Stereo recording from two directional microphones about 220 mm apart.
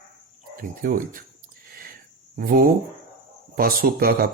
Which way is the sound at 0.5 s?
40° right (ahead or behind).